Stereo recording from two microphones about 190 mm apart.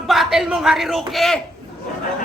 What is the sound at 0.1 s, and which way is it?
A man's voice, centre (ahead or behind).